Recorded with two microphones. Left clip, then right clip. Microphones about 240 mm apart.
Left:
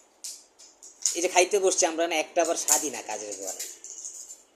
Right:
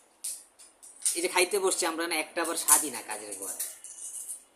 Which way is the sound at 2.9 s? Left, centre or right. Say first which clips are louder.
Left 4 dB; left.